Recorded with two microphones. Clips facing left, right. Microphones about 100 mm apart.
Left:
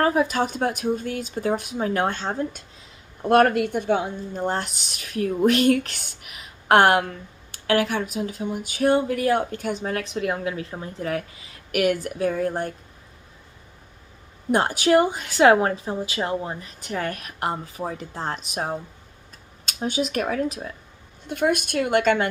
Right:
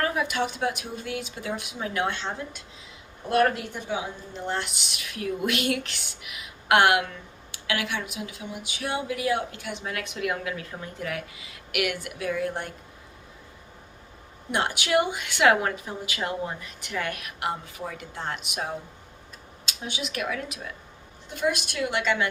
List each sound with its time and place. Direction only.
0.0 s speech: 35° left (ahead or behind)
14.5 s speech: 40° left (ahead or behind)
21.2 s speech: 55° left (ahead or behind)